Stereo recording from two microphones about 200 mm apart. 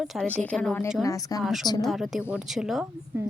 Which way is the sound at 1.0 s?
15° left (ahead or behind).